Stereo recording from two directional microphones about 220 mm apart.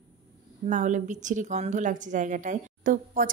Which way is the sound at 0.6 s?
35° right (ahead or behind).